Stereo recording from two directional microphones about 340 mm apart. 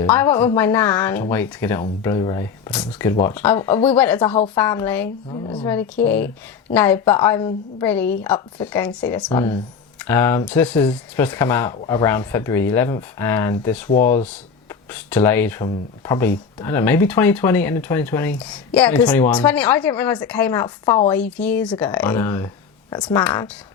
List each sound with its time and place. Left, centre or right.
0.0 s speech: centre